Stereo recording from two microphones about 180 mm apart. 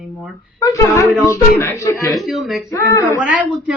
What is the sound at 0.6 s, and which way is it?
Speech, 20° left (ahead or behind).